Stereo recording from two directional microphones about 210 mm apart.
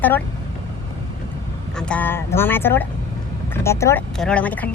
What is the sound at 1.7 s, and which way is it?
A woman's voice, 5° left (ahead or behind).